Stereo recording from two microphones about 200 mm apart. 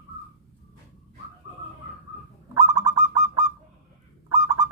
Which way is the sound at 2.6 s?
15° right (ahead or behind).